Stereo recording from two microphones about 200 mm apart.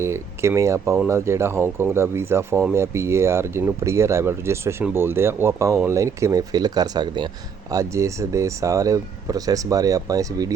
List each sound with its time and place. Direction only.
0.0 s speech: 15° right (ahead or behind)